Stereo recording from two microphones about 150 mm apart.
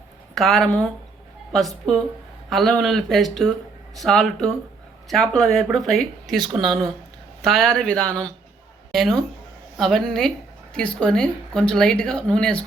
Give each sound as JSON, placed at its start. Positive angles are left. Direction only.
{"t": 0.3, "sound": "speech", "side_deg": 0}